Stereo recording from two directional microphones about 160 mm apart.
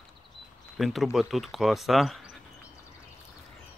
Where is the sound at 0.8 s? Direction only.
Centre (ahead or behind).